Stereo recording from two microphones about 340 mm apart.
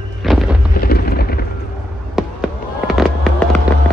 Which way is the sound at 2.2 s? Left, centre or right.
Centre.